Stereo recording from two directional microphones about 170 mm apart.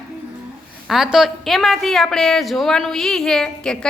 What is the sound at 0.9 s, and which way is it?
A woman's voice, 5° right (ahead or behind).